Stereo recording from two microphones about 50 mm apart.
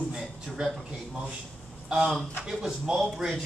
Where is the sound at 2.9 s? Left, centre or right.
Centre.